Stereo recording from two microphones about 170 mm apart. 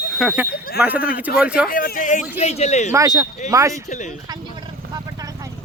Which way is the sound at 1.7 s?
55° left (ahead or behind).